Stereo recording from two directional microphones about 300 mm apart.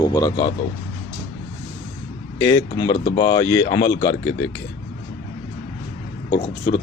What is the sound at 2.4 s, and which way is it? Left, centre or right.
Speech, centre.